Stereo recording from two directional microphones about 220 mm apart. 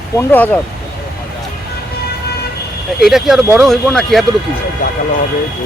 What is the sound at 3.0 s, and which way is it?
Speech, centre (ahead or behind).